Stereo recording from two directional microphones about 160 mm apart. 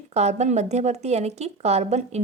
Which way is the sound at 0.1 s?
45° right (ahead or behind).